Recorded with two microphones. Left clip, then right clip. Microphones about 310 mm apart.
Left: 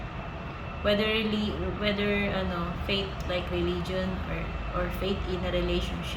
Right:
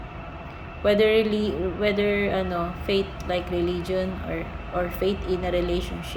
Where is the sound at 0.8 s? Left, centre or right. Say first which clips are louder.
Right 7 dB; centre.